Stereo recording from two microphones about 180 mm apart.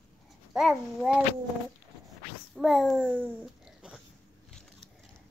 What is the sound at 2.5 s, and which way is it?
A child's voice, centre (ahead or behind).